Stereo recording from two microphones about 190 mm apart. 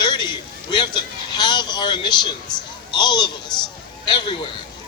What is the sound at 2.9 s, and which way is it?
A man's voice, 25° left (ahead or behind).